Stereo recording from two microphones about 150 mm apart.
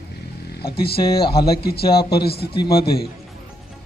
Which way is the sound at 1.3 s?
90° left.